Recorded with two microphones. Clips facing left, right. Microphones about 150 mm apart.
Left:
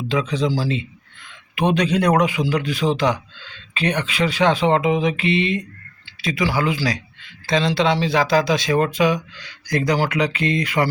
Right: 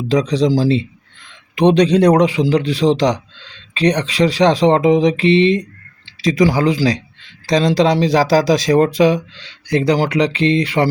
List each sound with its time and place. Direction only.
0.1 s speech: 35° right (ahead or behind)